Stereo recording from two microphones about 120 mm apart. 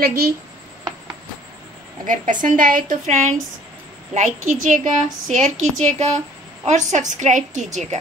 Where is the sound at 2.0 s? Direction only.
90° right; by 6.2 s 70° right (ahead or behind).